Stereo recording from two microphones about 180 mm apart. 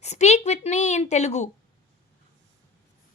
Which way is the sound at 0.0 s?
40° left (ahead or behind).